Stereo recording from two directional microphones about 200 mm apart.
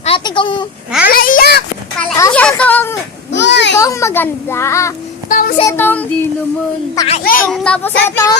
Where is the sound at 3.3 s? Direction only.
60° left (ahead or behind).